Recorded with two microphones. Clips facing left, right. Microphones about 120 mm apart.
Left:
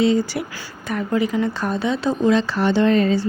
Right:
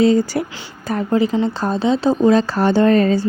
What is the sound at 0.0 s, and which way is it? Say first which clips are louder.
Speech: right 4 dB; 40° right (ahead or behind).